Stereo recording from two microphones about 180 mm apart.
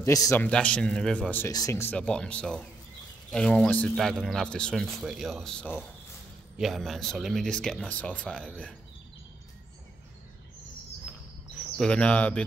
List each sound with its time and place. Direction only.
0.0 s speech: 15° left (ahead or behind)
0.5 s speech: 5° left (ahead or behind)
11.8 s speech: 5° left (ahead or behind)